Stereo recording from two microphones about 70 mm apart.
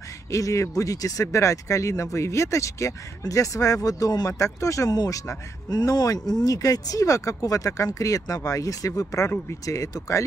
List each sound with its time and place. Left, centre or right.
0.3 s speech: left
6.4 s speech: left